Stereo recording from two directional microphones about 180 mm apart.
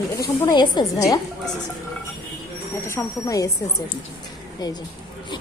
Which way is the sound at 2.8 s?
15° left (ahead or behind).